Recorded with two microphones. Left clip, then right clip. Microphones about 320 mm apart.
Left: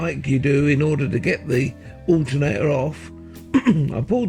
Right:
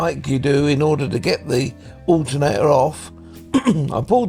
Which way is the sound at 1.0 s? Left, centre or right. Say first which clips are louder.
Right 2 dB; centre.